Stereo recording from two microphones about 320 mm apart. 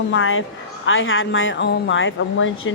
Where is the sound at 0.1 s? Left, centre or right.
Left.